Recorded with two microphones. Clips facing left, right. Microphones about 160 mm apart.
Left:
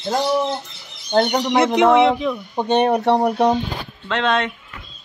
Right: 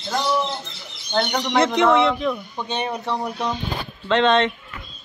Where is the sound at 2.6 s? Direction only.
60° left (ahead or behind).